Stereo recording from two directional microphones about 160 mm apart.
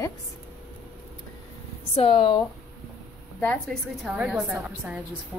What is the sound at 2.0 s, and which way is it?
Speech, 35° left (ahead or behind).